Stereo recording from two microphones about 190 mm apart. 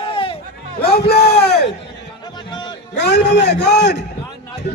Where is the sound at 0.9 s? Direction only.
55° left (ahead or behind).